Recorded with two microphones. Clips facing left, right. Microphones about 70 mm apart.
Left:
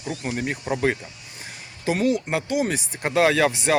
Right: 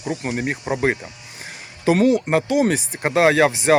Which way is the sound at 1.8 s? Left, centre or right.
Right.